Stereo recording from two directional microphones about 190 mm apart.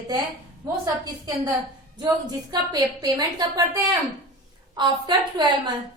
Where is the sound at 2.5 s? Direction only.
20° right (ahead or behind).